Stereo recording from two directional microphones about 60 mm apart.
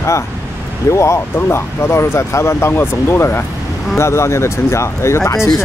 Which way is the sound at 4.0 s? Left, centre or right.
Left.